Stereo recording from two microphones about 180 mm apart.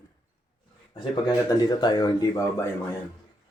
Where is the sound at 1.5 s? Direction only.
25° left (ahead or behind).